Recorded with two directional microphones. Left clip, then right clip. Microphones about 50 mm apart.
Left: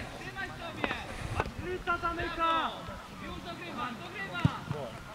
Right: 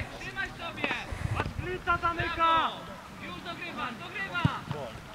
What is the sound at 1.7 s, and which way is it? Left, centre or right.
Speech, right.